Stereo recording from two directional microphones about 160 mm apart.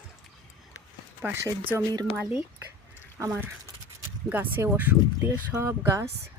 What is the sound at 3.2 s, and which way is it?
Speech, 15° right (ahead or behind).